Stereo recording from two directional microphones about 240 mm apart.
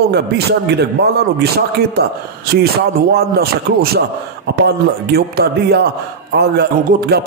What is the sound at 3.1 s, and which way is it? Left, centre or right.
A man's voice, right.